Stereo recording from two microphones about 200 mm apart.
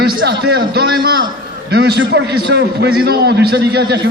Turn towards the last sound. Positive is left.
turn(degrees=-60)  # may be behind; listen again after turning